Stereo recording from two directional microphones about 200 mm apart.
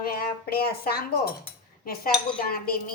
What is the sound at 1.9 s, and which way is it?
Cutlery, 50° left (ahead or behind).